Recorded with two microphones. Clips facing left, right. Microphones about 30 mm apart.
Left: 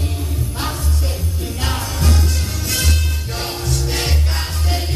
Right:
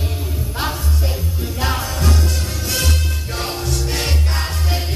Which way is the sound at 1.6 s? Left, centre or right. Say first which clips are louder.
Right 2 dB; centre.